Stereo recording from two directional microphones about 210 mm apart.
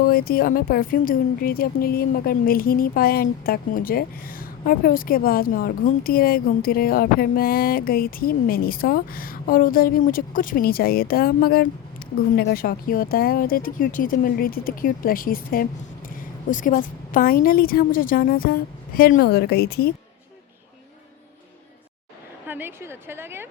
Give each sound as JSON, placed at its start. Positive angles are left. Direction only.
{"t": 0.0, "sound": "a woman's voice", "side_deg": 45}
{"t": 22.4, "sound": "a woman's voice", "side_deg": -10}